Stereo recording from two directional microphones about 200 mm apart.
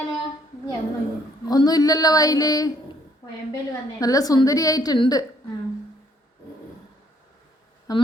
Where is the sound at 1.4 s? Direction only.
20° left (ahead or behind).